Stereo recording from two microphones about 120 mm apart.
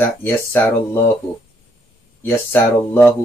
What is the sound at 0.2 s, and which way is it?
Speech, 20° left (ahead or behind).